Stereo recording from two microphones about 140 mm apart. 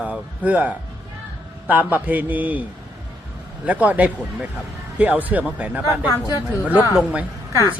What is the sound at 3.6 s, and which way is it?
A man's voice, 10° right (ahead or behind).